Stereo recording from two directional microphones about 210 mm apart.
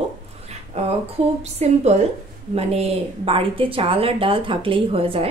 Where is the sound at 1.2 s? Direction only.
30° right (ahead or behind).